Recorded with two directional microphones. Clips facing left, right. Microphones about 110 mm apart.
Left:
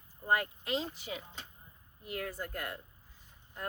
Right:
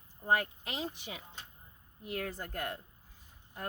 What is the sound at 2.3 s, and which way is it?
Speech, 30° right (ahead or behind).